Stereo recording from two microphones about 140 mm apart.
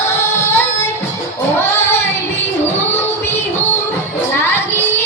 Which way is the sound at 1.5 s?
15° left (ahead or behind).